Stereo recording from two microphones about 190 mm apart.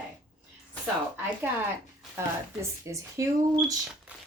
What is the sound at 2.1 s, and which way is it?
A woman's voice, 15° right (ahead or behind).